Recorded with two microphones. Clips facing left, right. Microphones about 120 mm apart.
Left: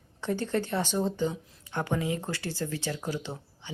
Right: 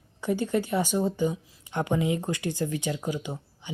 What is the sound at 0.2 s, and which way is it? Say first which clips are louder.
Speech: right 3 dB; 10° right (ahead or behind).